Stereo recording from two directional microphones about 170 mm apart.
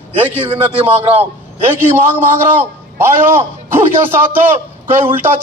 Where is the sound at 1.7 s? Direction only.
15° right (ahead or behind).